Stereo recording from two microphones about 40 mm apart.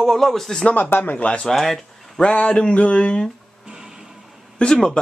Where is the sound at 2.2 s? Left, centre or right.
Left.